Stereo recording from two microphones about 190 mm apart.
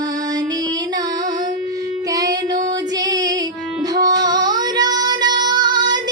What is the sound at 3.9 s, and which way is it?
Female singing, 20° right (ahead or behind).